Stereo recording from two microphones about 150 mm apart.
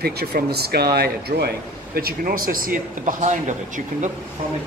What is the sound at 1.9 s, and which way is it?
Speech, 80° right.